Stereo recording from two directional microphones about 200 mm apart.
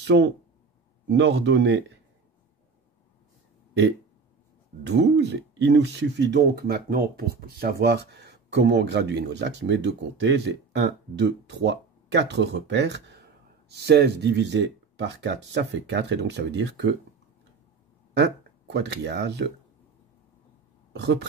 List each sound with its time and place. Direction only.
0.0 s speech: 60° right (ahead or behind)
4.8 s speech: 60° right (ahead or behind)
18.1 s speech: 60° right (ahead or behind)
20.9 s speech: 60° right (ahead or behind)